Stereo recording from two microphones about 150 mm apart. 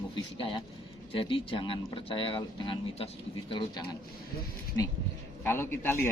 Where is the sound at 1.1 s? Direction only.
35° left (ahead or behind).